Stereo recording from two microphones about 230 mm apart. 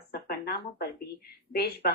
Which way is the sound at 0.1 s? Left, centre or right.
Left.